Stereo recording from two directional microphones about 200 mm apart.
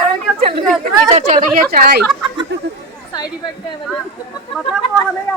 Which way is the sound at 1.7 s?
50° right (ahead or behind).